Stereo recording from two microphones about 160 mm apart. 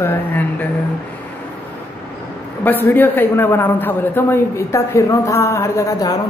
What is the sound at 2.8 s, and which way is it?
A woman's voice, 10° left (ahead or behind).